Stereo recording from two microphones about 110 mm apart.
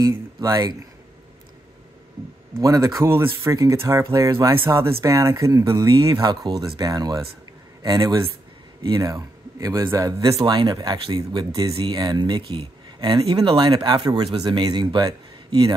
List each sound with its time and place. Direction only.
0.4 s speech: 35° right (ahead or behind)
2.6 s speech: 35° right (ahead or behind)
10.4 s speech: 45° right (ahead or behind)
11.1 s speech: 35° right (ahead or behind)